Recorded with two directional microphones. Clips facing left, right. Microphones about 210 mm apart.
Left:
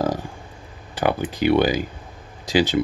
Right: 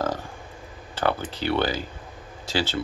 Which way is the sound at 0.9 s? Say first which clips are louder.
Left 4 dB; 15° left (ahead or behind).